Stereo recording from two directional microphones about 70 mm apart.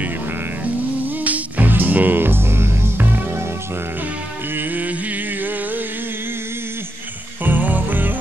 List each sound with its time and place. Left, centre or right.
1.0 s music: right
4.6 s music: right
7.4 s music: right